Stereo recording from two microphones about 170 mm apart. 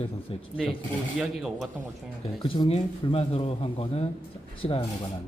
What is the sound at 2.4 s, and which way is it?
A man's voice, 30° left (ahead or behind).